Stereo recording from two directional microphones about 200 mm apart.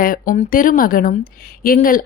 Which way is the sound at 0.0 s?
45° left (ahead or behind).